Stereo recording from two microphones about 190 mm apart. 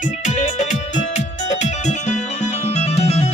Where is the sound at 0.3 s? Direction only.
40° left (ahead or behind).